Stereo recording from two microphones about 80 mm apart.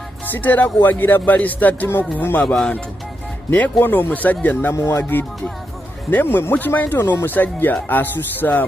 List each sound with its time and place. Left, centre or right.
0.3 s speech: left
2.4 s speech: centre
3.4 s speech: left